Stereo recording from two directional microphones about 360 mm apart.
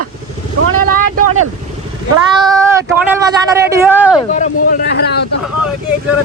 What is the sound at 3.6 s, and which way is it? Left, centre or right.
Speech, centre.